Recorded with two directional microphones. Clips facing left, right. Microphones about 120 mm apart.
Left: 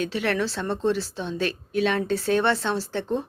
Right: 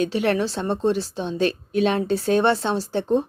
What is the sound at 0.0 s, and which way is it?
A woman's voice, 20° right (ahead or behind).